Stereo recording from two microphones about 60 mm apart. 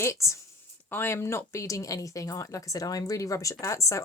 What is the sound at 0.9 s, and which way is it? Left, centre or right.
Speech, left.